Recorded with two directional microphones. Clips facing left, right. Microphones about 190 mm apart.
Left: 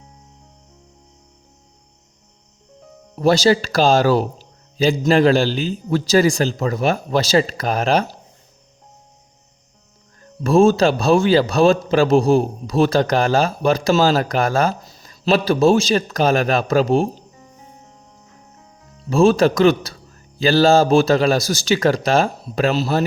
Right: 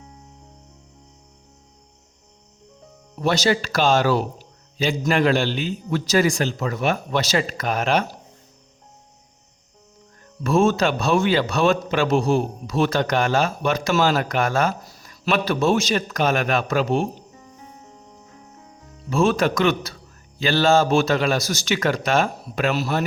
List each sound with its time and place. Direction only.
3.2 s speech: 35° left (ahead or behind)
10.4 s speech: 35° left (ahead or behind)
14.8 s speech: 25° left (ahead or behind)
19.1 s speech: 30° left (ahead or behind)